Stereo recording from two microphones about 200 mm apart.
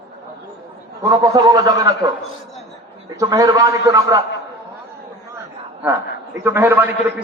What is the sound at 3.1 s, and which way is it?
A man's voice, 15° right (ahead or behind).